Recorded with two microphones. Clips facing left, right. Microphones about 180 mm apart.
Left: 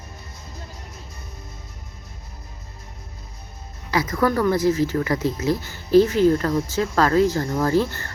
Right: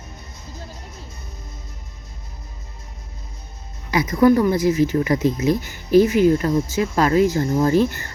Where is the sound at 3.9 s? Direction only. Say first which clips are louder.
Right 6 dB; 20° right (ahead or behind).